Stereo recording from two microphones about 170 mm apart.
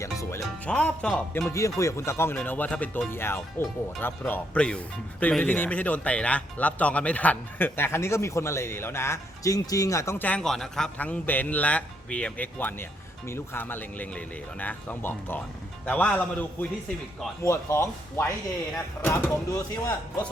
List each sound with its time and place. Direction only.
0.0 s speech: 20° left (ahead or behind)
1.5 s speech: 20° left (ahead or behind)